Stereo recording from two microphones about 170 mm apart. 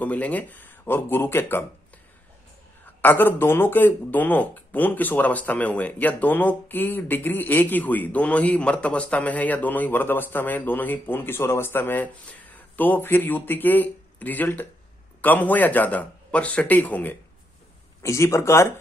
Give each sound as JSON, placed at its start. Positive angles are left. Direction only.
{"t": 0.0, "sound": "speech", "side_deg": 10}
{"t": 3.0, "sound": "speech", "side_deg": 10}